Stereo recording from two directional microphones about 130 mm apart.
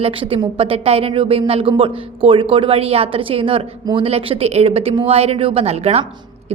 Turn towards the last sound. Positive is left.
turn(degrees=-55)  # may be behind; listen again after turning